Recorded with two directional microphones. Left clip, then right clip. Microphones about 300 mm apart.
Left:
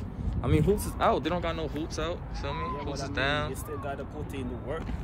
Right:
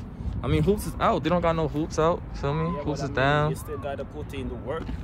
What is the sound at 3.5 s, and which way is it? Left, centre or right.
Speech, right.